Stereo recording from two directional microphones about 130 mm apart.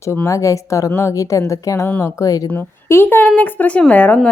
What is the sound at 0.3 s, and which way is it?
A woman's voice, 25° left (ahead or behind).